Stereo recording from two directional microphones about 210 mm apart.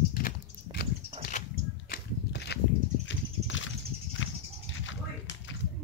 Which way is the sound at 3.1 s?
65° left (ahead or behind).